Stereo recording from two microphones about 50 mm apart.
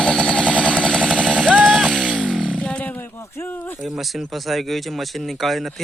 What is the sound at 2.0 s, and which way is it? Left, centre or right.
Chainsaw, right.